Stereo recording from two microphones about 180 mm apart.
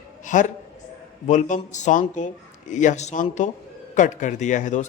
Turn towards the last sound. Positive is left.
turn(degrees=45)  # may be behind; listen again after turning